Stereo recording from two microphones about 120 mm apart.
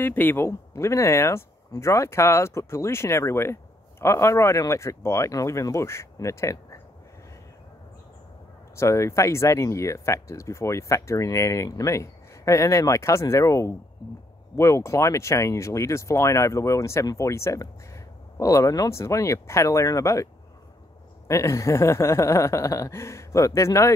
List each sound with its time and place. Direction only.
0.0 s speech: 15° left (ahead or behind)
8.7 s speech: 25° left (ahead or behind)
21.3 s speech: 25° left (ahead or behind)